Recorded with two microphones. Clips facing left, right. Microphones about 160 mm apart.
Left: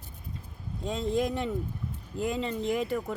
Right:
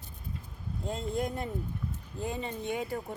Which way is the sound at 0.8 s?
90° left.